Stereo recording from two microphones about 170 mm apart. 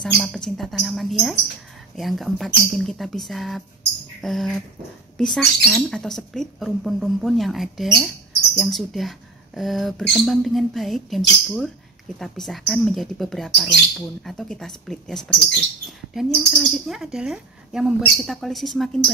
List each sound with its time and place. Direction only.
0.0 s speech: 5° left (ahead or behind)